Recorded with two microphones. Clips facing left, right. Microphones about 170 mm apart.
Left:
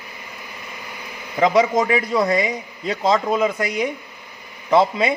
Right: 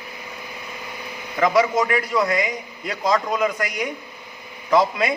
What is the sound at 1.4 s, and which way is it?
A man's voice, 25° left (ahead or behind).